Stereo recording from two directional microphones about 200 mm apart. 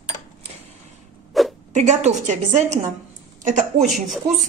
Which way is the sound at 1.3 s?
Centre (ahead or behind).